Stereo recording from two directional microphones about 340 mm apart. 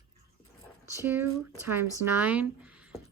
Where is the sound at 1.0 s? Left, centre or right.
Centre.